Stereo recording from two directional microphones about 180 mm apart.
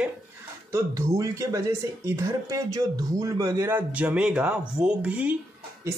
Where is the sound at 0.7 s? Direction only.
15° right (ahead or behind).